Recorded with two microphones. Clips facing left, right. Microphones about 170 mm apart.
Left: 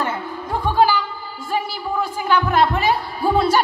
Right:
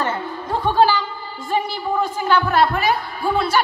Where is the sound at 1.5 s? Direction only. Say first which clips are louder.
Right 2 dB; 10° left (ahead or behind).